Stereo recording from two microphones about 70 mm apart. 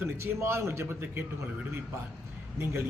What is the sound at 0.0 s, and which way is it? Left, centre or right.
Speech, right.